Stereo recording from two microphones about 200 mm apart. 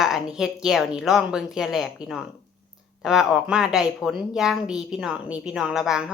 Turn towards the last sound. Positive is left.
turn(degrees=-5)  # may be behind; listen again after turning